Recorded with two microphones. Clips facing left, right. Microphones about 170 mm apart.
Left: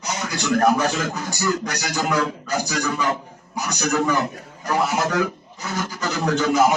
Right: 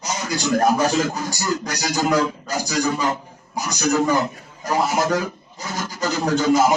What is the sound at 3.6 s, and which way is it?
A man's voice, 60° left (ahead or behind).